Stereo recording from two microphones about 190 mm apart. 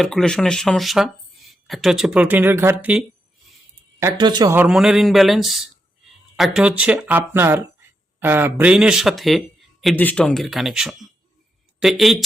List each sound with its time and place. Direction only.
0.0 s speech: centre (ahead or behind)
4.0 s speech: 20° right (ahead or behind)
4.5 s speech: 5° right (ahead or behind)